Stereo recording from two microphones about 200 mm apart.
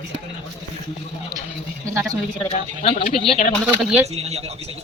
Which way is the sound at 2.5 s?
35° left (ahead or behind).